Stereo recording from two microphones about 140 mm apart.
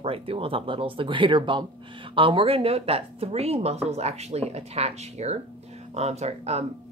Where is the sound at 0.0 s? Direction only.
40° right (ahead or behind).